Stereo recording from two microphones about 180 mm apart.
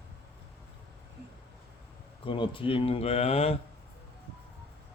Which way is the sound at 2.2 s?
30° left (ahead or behind).